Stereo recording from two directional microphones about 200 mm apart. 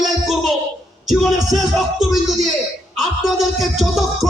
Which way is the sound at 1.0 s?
Centre (ahead or behind).